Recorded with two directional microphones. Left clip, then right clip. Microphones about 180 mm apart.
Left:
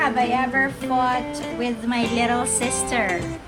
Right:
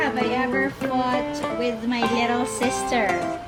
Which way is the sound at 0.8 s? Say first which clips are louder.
Left 2 dB; centre (ahead or behind).